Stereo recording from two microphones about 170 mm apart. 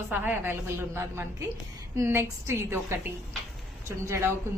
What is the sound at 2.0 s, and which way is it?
A woman's voice, 15° right (ahead or behind).